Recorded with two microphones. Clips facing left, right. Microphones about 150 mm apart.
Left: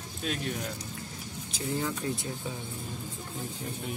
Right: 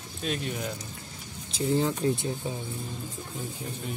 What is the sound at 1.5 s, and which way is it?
Speech, 30° right (ahead or behind).